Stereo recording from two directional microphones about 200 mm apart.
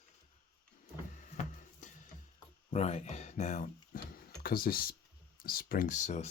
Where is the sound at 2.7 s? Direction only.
35° left (ahead or behind).